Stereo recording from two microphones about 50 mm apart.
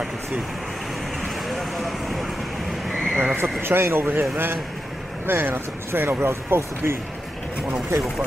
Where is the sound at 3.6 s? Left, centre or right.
Right.